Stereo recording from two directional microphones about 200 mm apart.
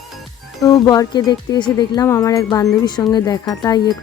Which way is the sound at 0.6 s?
20° left (ahead or behind).